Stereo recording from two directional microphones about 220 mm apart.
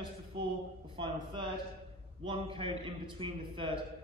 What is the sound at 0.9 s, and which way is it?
A man's voice, 20° right (ahead or behind).